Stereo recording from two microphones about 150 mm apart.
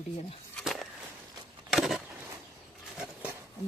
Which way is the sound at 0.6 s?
Centre (ahead or behind).